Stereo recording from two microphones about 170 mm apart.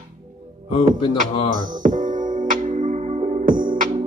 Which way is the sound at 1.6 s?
50° right (ahead or behind).